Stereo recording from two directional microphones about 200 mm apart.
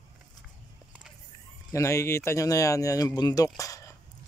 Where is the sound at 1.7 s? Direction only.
15° left (ahead or behind).